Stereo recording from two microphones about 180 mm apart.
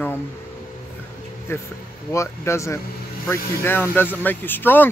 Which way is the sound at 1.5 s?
15° left (ahead or behind).